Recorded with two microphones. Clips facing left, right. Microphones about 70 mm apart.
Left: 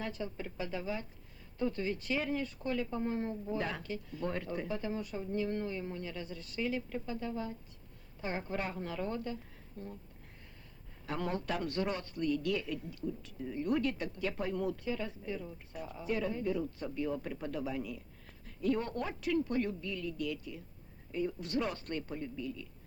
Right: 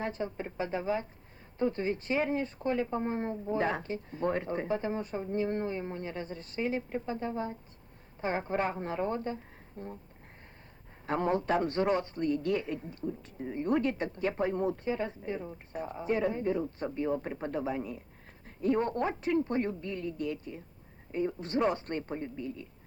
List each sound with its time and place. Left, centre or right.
0.0 s speech: right
11.0 s speech: right